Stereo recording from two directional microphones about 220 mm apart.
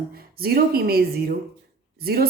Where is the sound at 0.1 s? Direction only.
45° right (ahead or behind).